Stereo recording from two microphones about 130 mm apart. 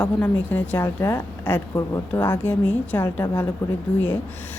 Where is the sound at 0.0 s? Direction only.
10° left (ahead or behind).